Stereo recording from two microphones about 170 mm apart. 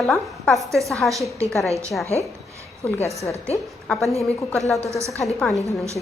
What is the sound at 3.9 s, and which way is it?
A woman's voice, centre (ahead or behind).